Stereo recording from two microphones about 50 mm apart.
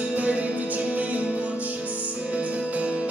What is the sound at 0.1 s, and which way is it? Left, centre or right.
Music, right.